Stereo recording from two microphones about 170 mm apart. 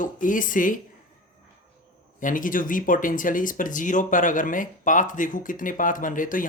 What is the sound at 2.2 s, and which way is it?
Speech, 50° left (ahead or behind).